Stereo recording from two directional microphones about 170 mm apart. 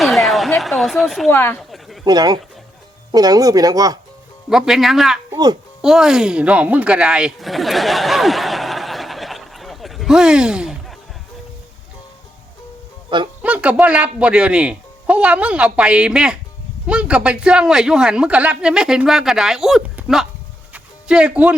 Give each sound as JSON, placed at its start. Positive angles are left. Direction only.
{"t": 0.0, "sound": "a sound", "side_deg": 0}
{"t": 0.8, "sound": "a man's voice", "side_deg": 0}
{"t": 1.3, "sound": "speech", "side_deg": 15}
{"t": 2.0, "sound": "speech", "side_deg": -25}
{"t": 4.4, "sound": "a man's voice", "side_deg": -5}
{"t": 5.3, "sound": "speech", "side_deg": -25}
{"t": 5.8, "sound": "speech", "side_deg": -5}
{"t": 13.4, "sound": "a man's voice", "side_deg": -10}
{"t": 20.7, "sound": "a sound", "side_deg": -5}